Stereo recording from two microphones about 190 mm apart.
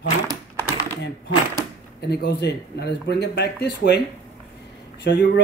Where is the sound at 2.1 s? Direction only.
60° left (ahead or behind).